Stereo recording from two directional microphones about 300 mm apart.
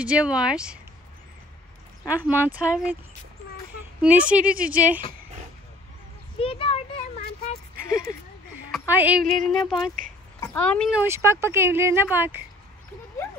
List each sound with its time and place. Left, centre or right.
0.0 s a woman's voice: centre
2.0 s a woman's voice: centre
4.0 s a woman's voice: centre
6.4 s a sound: centre
7.7 s a sound: right
8.7 s a woman's voice: centre